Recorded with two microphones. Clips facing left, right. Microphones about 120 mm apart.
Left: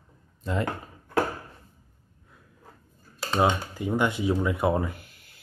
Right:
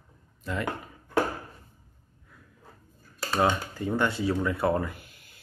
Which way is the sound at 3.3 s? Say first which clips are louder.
Left 1 dB; 15° left (ahead or behind).